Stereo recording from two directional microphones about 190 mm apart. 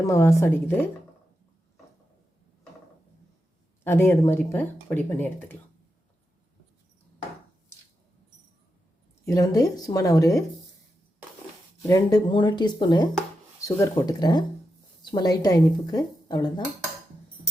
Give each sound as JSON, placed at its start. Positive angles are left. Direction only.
{"t": 0.0, "sound": "speech", "side_deg": 15}
{"t": 3.8, "sound": "speech", "side_deg": 10}
{"t": 9.2, "sound": "speech", "side_deg": 15}
{"t": 11.9, "sound": "speech", "side_deg": 20}